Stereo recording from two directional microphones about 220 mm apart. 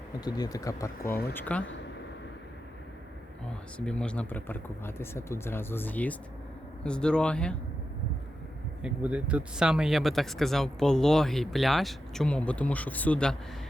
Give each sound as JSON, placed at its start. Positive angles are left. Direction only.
{"t": 0.3, "sound": "speech", "side_deg": 15}
{"t": 1.0, "sound": "speech", "side_deg": 45}
{"t": 1.3, "sound": "speech", "side_deg": 10}
{"t": 3.8, "sound": "speech", "side_deg": 5}
{"t": 8.8, "sound": "speech", "side_deg": -5}